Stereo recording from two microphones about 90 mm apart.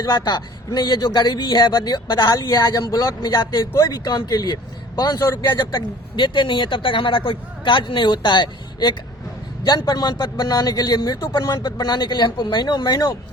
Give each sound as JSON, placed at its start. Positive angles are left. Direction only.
{"t": 0.0, "sound": "a man's voice", "side_deg": 50}
{"t": 3.2, "sound": "a man's voice", "side_deg": 50}